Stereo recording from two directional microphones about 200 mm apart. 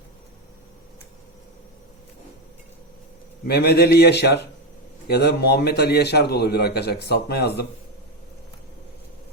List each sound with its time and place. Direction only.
3.4 s a man's voice: 55° left (ahead or behind)